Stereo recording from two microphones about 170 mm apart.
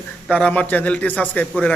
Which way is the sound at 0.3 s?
10° left (ahead or behind).